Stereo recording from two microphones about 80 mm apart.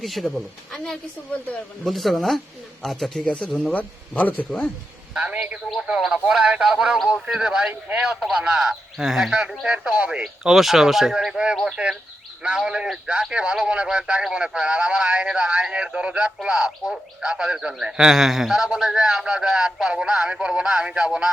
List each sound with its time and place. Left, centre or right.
0.0 s speech: centre
3.2 s a man's voice: centre
5.1 s a man's voice: centre
5.7 s a man's voice: centre